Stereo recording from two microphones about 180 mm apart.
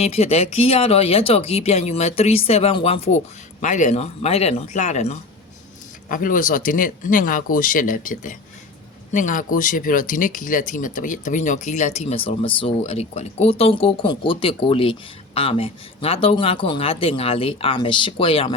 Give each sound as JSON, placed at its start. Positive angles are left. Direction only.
{"t": 0.0, "sound": "speech", "side_deg": 35}